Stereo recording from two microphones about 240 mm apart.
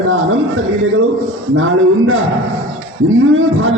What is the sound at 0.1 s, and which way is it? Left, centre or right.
Speech, right.